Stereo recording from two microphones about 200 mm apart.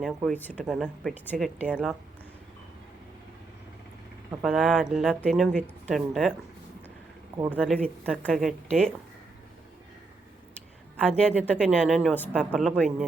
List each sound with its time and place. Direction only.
0.0 s a woman's voice: centre (ahead or behind)
4.4 s a woman's voice: centre (ahead or behind)
7.3 s speech: 15° right (ahead or behind)
7.6 s a woman's voice: centre (ahead or behind)
11.2 s a woman's voice: 5° left (ahead or behind)